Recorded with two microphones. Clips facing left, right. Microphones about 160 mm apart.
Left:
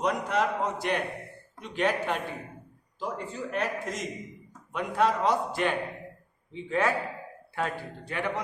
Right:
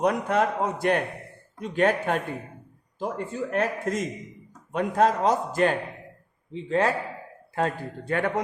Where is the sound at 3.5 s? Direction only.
50° right (ahead or behind); by 6.9 s 35° right (ahead or behind).